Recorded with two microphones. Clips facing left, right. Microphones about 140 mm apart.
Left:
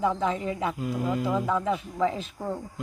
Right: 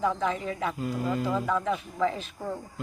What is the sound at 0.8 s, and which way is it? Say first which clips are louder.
Speech: even; 10° left (ahead or behind).